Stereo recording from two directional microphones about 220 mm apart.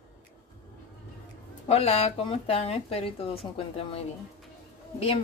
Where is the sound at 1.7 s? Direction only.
30° left (ahead or behind).